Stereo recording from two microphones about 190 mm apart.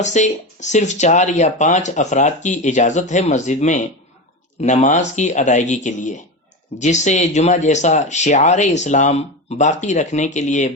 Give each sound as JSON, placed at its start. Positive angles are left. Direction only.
{"t": 0.0, "sound": "speech", "side_deg": 40}